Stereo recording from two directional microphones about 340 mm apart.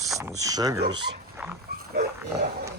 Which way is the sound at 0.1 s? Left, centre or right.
Centre.